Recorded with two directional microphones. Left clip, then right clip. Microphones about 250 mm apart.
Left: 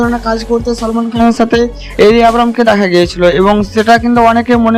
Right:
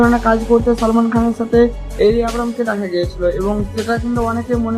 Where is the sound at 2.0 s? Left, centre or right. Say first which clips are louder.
Left 8 dB; left.